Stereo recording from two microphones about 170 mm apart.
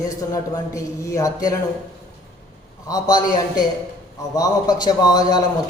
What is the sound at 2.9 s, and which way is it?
A man's voice, 25° left (ahead or behind).